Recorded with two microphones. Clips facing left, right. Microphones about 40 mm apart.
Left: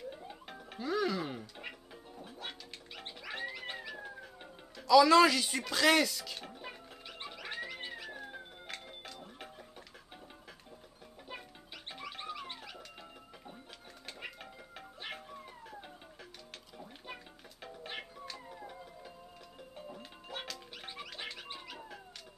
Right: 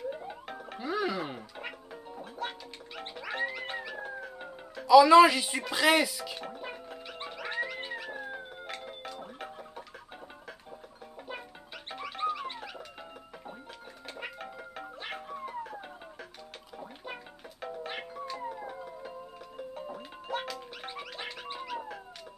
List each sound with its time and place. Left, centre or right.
0.1 s music: centre
3.0 s music: centre
11.9 s music: right
14.2 s music: right
17.0 s music: right
19.9 s music: centre